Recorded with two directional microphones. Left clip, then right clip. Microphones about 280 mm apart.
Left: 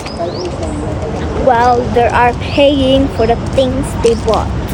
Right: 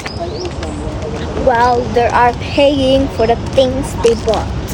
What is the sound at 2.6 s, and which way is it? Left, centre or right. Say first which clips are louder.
Speech: left 1 dB; right.